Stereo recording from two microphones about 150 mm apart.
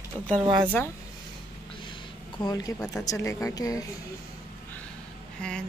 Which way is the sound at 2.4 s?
25° left (ahead or behind).